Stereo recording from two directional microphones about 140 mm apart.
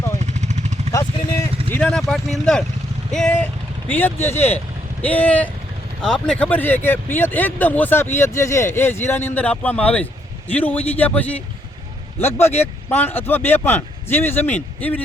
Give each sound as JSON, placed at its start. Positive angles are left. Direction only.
{"t": 0.2, "sound": "vehicle", "side_deg": -55}
{"t": 0.9, "sound": "vehicle", "side_deg": 20}
{"t": 1.7, "sound": "speech", "side_deg": 5}
{"t": 12.9, "sound": "speech", "side_deg": 15}